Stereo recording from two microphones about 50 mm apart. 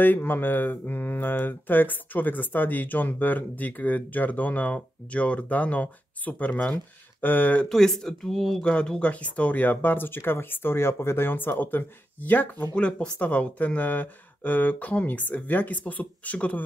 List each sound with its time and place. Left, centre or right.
0.0 s speech: left
7.7 s speech: centre
8.6 s speech: left
12.7 s speech: left